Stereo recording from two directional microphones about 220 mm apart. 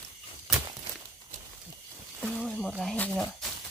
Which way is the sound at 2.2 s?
Centre (ahead or behind).